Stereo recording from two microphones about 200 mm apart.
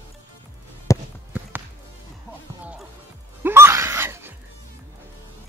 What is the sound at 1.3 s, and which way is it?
Music, 10° right (ahead or behind).